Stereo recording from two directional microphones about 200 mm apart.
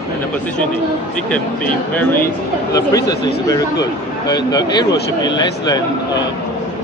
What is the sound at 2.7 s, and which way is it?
Speech, 15° left (ahead or behind).